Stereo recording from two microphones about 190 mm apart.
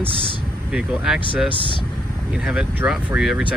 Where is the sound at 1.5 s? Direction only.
25° left (ahead or behind).